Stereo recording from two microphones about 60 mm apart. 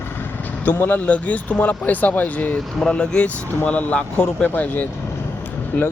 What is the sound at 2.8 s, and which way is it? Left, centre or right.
Speech, centre.